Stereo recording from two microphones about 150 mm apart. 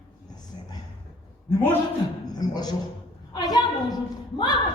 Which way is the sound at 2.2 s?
25° left (ahead or behind).